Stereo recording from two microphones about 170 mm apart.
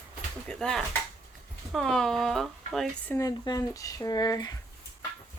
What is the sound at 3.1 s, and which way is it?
Speech, 20° left (ahead or behind).